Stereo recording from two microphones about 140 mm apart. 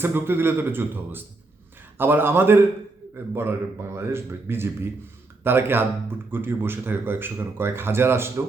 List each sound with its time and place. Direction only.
0.0 s speech: 15° right (ahead or behind)